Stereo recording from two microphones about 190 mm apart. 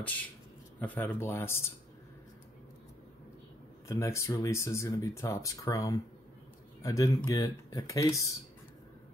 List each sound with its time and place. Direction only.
0.7 s speech: 10° left (ahead or behind)
3.8 s speech: 15° left (ahead or behind)